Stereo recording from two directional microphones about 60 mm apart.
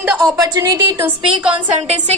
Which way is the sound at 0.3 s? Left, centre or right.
Right.